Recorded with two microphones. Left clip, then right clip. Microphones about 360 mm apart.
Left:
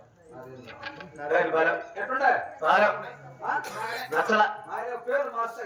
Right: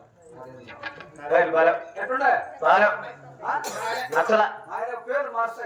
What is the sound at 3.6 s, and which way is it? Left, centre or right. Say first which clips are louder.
Speech: right 4 dB; centre.